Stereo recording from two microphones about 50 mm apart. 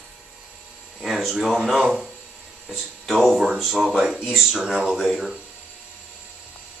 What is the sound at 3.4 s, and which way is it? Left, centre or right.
Speech, centre.